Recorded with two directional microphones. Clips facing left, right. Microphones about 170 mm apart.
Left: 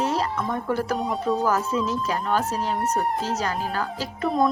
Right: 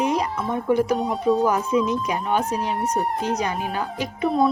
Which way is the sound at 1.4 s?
15° right (ahead or behind).